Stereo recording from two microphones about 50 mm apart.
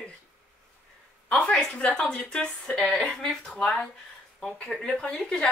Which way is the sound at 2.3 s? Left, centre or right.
Centre.